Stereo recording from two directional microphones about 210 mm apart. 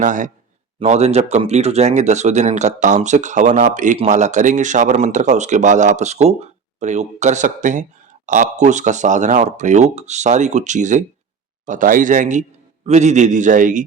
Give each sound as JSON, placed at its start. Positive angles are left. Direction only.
{"t": 0.0, "sound": "speech", "side_deg": -35}